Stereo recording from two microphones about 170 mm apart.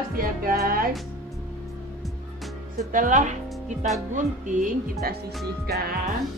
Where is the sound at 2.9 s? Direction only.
45° right (ahead or behind).